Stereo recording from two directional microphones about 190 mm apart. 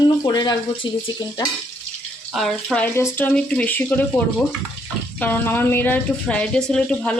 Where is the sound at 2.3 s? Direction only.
Centre (ahead or behind).